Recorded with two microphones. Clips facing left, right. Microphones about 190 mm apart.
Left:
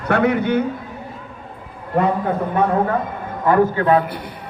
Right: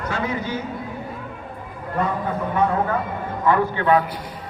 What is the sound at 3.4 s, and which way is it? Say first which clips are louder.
Speech: left 4 dB; 45° left (ahead or behind).